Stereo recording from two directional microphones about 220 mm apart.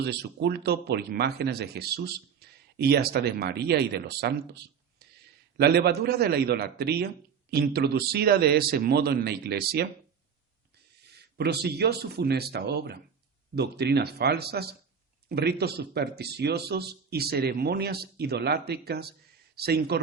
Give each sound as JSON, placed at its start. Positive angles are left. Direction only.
{"t": 0.0, "sound": "speech", "side_deg": -50}
{"t": 11.2, "sound": "speech", "side_deg": -50}